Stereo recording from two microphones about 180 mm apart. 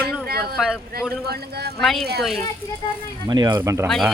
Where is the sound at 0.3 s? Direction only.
60° right (ahead or behind).